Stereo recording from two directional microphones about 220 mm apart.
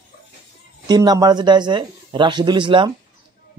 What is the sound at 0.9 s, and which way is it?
A man's voice, 15° right (ahead or behind).